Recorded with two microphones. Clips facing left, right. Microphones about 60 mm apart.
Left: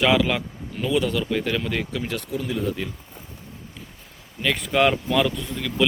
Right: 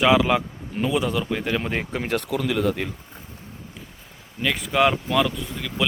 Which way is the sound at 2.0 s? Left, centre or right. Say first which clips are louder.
Right 4 dB; right.